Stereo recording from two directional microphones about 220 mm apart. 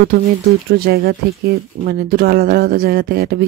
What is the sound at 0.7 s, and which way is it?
Speech, 45° right (ahead or behind).